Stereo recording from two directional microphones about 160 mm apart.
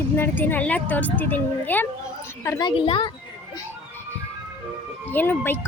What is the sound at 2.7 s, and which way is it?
Speech, 35° left (ahead or behind).